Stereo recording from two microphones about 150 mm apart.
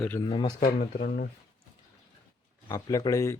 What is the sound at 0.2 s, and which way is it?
Speech, 30° left (ahead or behind).